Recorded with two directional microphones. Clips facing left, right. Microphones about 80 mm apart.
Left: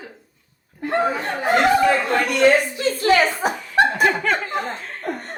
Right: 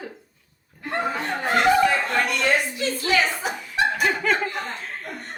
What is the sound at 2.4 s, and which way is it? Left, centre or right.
A woman's voice, left.